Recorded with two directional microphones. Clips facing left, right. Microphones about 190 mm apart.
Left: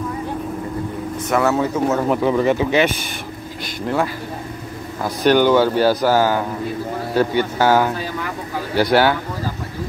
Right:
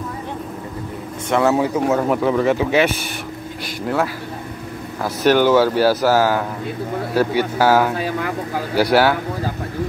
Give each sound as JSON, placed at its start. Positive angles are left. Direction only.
{"t": 1.4, "sound": "speech", "side_deg": -10}
{"t": 2.0, "sound": "speech", "side_deg": 0}